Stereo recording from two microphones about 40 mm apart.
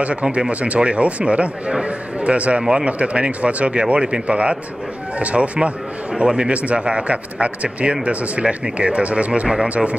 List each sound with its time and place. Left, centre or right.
0.0 s speech: right
2.6 s speech: right
2.9 s speech: right
6.1 s speech: right
9.5 s speech: centre